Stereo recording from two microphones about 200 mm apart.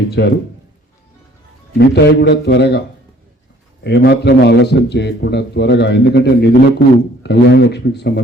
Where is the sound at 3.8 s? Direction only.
55° left (ahead or behind).